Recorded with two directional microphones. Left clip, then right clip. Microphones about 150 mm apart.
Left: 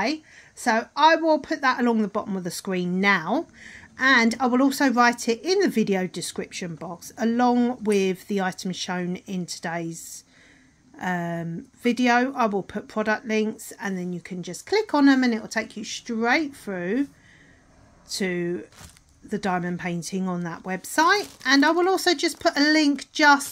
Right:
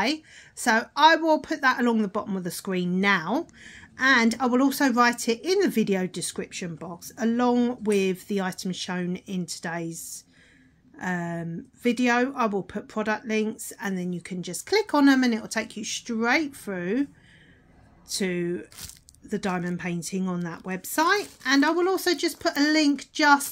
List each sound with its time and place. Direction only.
0.0 s a woman's voice: centre (ahead or behind); by 23.4 s 20° left (ahead or behind)